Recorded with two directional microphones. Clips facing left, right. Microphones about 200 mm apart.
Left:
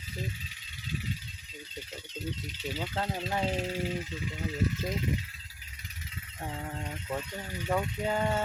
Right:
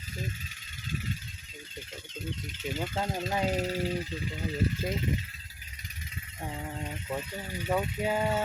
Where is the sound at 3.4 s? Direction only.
40° right (ahead or behind).